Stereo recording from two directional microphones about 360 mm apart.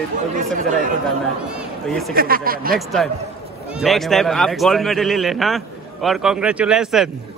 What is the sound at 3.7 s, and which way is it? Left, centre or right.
A man's voice, centre.